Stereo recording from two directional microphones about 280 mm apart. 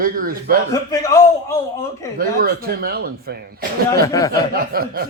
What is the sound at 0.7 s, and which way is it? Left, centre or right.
A man's voice, centre.